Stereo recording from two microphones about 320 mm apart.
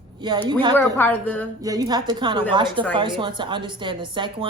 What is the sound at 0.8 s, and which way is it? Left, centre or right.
Speech, centre.